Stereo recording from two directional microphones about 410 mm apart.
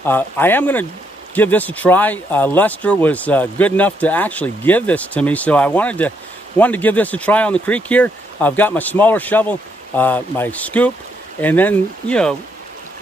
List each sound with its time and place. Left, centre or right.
0.0 s speech: centre